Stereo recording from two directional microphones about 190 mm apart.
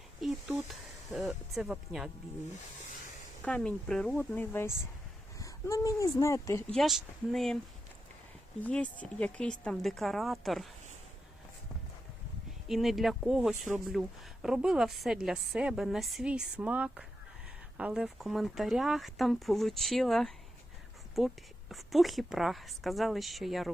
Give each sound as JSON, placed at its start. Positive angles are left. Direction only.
{"t": 0.2, "sound": "speech", "side_deg": 0}
{"t": 3.4, "sound": "speech", "side_deg": 5}
{"t": 8.6, "sound": "a woman's voice", "side_deg": 5}
{"t": 12.6, "sound": "a woman's voice", "side_deg": 0}